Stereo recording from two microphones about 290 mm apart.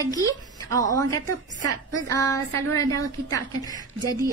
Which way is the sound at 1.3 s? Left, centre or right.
Right.